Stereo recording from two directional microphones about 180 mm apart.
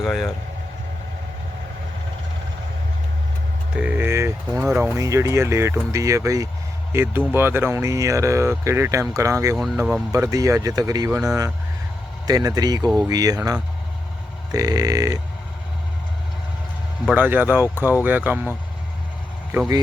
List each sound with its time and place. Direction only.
0.0 s speech: centre (ahead or behind)
3.8 s speech: 10° right (ahead or behind)
17.1 s speech: 10° right (ahead or behind)